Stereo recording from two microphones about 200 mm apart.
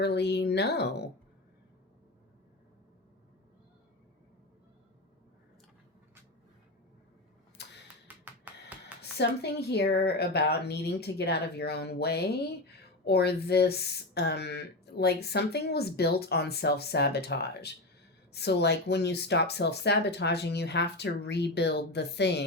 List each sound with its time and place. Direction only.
0.0 s speech: 55° left (ahead or behind)
7.6 s music: 60° left (ahead or behind)
8.1 s music: 5° right (ahead or behind)
9.0 s speech: 55° left (ahead or behind)